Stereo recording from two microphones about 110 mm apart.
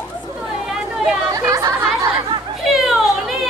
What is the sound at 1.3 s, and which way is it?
Chatter, 30° right (ahead or behind).